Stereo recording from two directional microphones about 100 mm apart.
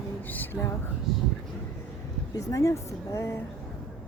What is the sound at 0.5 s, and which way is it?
Speech, 10° right (ahead or behind).